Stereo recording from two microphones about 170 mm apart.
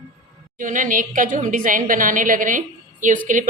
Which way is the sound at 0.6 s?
50° right (ahead or behind).